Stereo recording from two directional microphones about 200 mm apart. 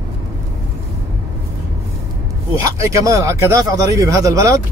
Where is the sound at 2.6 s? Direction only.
15° right (ahead or behind).